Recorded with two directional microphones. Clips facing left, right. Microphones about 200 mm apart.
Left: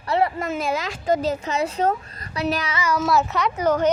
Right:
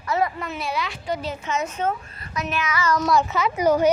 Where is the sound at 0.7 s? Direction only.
45° left (ahead or behind).